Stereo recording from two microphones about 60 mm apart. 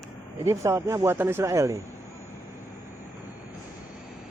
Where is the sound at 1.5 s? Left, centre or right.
Right.